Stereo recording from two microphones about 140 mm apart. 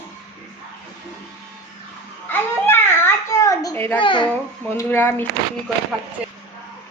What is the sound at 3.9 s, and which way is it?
Speech, 35° left (ahead or behind).